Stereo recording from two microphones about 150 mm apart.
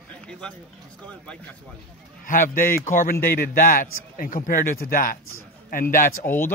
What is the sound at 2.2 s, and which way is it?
A man's voice, 65° left (ahead or behind).